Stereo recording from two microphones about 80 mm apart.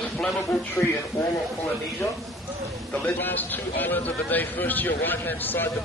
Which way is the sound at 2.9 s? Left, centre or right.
Left.